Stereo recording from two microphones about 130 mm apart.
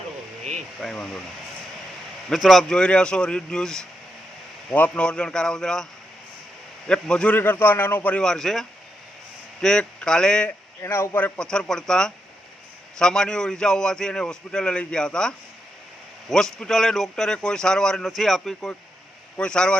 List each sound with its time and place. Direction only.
0.8 s speech: 5° left (ahead or behind)
2.3 s a man's voice: centre (ahead or behind)
10.8 s a man's voice: 20° left (ahead or behind)
11.3 s a man's voice: 5° left (ahead or behind)